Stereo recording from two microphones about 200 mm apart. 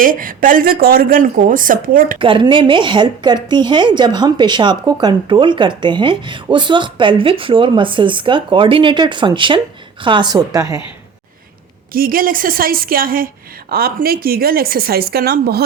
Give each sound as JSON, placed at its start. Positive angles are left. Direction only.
{"t": 0.0, "sound": "a woman's voice", "side_deg": -45}
{"t": 2.1, "sound": "speech", "side_deg": -25}
{"t": 11.9, "sound": "a woman's voice", "side_deg": -45}